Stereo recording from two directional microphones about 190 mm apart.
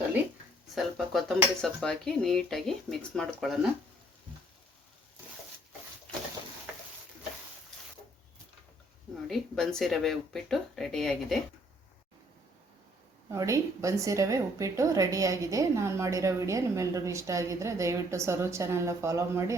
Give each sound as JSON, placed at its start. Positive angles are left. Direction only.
{"t": 0.8, "sound": "speech", "side_deg": 0}
{"t": 9.2, "sound": "speech", "side_deg": 0}
{"t": 13.3, "sound": "a woman's voice", "side_deg": -15}